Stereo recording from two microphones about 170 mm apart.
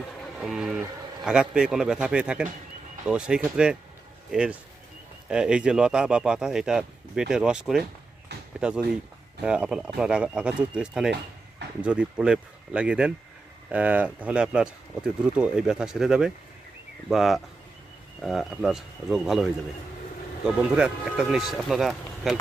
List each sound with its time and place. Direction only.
0.3 s speech: centre (ahead or behind)
8.3 s a sound: 75° right (ahead or behind)
8.6 s speech: 5° right (ahead or behind)
20.7 s speech: 5° right (ahead or behind)